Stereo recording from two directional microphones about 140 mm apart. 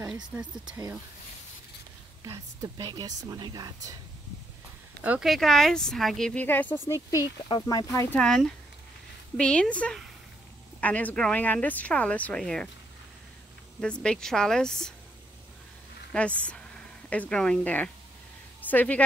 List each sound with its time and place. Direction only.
0.1 s speech: 10° right (ahead or behind)
2.2 s speech: 25° right (ahead or behind)
5.2 s speech: centre (ahead or behind); by 7.2 s 20° left (ahead or behind)
7.4 s speech: 30° left (ahead or behind)
8.1 s speech: 5° left (ahead or behind)
9.4 s speech: 10° left (ahead or behind)
13.7 s speech: 5° left (ahead or behind)
16.1 s a woman's voice: 10° left (ahead or behind)